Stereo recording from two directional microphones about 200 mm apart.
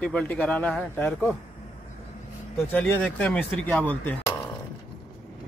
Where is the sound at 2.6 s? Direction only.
10° left (ahead or behind).